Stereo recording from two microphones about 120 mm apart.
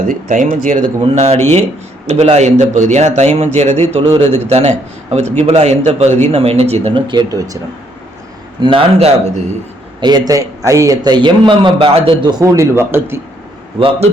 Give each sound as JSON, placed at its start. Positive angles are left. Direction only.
{"t": 0.3, "sound": "speech", "side_deg": -90}
{"t": 1.0, "sound": "a man's voice", "side_deg": -60}
{"t": 7.1, "sound": "a man's voice", "side_deg": -35}
{"t": 8.6, "sound": "a man's voice", "side_deg": -50}
{"t": 10.0, "sound": "a man's voice", "side_deg": -35}
{"t": 12.3, "sound": "a man's voice", "side_deg": -25}
{"t": 13.7, "sound": "a man's voice", "side_deg": -50}